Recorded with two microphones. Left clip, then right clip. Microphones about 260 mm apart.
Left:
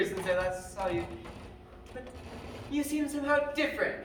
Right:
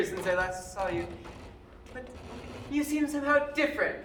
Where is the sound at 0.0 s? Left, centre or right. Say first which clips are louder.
Right 1 dB; centre.